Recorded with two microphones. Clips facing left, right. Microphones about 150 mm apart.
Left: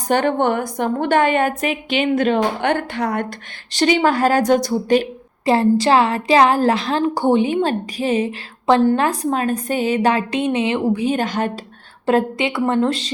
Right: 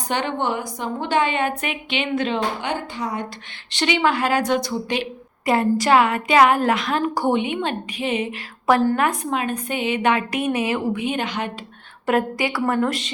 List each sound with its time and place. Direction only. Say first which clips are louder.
0.1 s a woman's voice: left 7 dB; 50° left (ahead or behind); by 3.2 s 65° left (ahead or behind)
3.7 s a woman's voice: left 4 dB; 40° left (ahead or behind)
5.5 s a woman's voice: left 3 dB; 30° left (ahead or behind)
12.0 s a woman's voice: left 3 dB; 25° left (ahead or behind)